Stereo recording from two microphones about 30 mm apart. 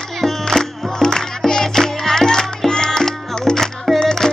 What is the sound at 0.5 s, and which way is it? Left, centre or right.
Music, centre.